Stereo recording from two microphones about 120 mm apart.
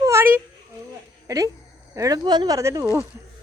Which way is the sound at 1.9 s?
30° right (ahead or behind).